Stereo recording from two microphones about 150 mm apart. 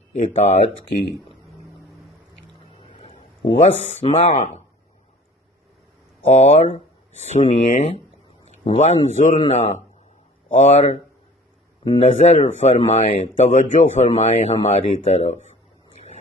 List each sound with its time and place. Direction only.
0.1 s speech: 50° left (ahead or behind)
2.8 s speech: 40° left (ahead or behind)
6.3 s speech: 45° left (ahead or behind); by 7.9 s 60° left (ahead or behind)
8.6 s speech: 45° left (ahead or behind)